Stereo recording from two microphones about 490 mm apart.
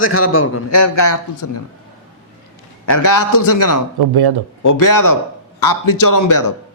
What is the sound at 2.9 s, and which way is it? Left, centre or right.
Speech, left.